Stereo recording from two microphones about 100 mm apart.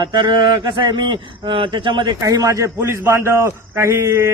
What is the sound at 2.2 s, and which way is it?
A man's voice, 35° right (ahead or behind).